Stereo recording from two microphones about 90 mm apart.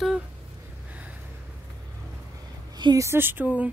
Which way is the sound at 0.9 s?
15° right (ahead or behind).